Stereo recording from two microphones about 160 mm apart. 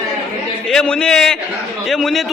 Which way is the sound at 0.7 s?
5° left (ahead or behind).